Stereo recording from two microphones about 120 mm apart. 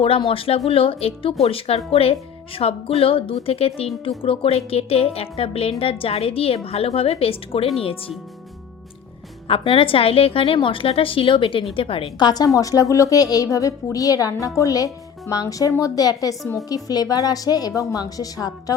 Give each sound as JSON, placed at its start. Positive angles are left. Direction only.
{"t": 0.3, "sound": "a woman's voice", "side_deg": 55}
{"t": 9.5, "sound": "speech", "side_deg": 50}
{"t": 12.2, "sound": "a woman's voice", "side_deg": 35}